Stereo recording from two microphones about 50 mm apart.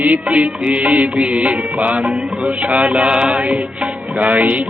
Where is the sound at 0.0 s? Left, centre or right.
Right.